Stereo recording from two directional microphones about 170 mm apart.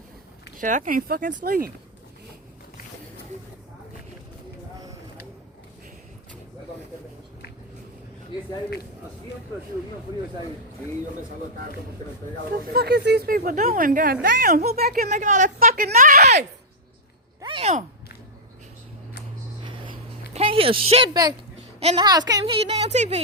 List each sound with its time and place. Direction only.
0.6 s speech: 50° right (ahead or behind)
12.5 s speech: 65° right (ahead or behind)
15.1 s a woman's voice: 45° right (ahead or behind)
17.4 s a sound: 35° right (ahead or behind)
20.3 s speech: 35° right (ahead or behind)
21.8 s a woman's voice: 35° right (ahead or behind)
22.0 s a woman's voice: 25° right (ahead or behind)
22.5 s speech: 35° right (ahead or behind)